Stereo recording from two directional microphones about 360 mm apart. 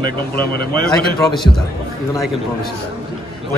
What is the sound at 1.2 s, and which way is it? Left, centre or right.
Speech, centre.